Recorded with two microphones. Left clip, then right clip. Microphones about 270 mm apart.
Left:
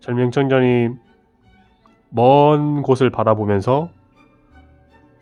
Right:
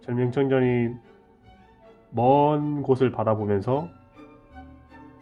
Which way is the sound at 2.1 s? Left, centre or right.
Left.